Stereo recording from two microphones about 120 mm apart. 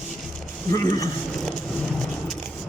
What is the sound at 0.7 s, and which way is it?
Speech, 30° left (ahead or behind).